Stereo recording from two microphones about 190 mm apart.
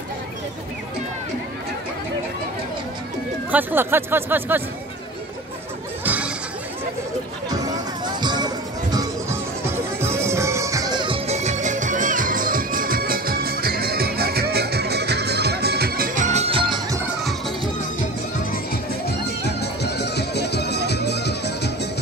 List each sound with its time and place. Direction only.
3.5 s speech: 10° right (ahead or behind)
6.0 s a sound: 10° right (ahead or behind)
7.4 s music: 20° right (ahead or behind)
17.0 s music: centre (ahead or behind)
19.0 s music: 60° left (ahead or behind)